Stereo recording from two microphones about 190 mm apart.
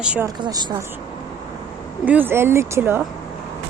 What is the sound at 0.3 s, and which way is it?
Speech, 25° right (ahead or behind).